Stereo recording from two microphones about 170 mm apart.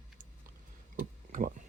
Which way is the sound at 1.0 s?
50° right (ahead or behind).